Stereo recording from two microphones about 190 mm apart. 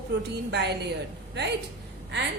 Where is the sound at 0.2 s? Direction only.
65° right (ahead or behind).